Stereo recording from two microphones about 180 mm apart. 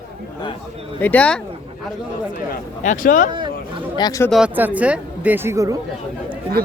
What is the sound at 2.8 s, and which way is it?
Speech, 50° left (ahead or behind).